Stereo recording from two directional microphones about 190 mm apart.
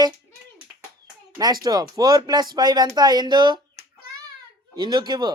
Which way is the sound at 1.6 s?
20° right (ahead or behind).